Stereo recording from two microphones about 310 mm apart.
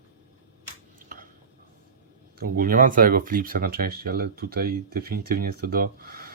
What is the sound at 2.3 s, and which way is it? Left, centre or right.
Speech, right.